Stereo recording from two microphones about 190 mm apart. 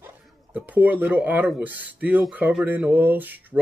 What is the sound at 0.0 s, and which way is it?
Speech, 10° right (ahead or behind).